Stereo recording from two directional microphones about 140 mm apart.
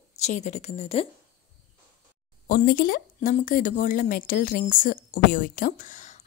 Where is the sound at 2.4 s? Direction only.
90° left.